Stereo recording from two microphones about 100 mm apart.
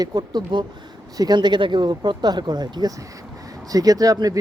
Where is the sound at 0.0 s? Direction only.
45° right (ahead or behind).